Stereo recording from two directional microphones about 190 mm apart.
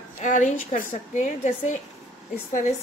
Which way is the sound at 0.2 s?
40° left (ahead or behind).